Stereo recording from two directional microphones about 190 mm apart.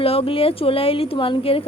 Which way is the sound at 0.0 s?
30° left (ahead or behind).